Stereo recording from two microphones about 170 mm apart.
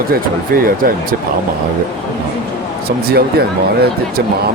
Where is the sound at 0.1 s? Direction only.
60° right (ahead or behind).